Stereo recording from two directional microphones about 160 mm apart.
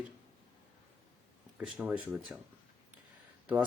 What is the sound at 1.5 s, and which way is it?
Speech, 10° right (ahead or behind).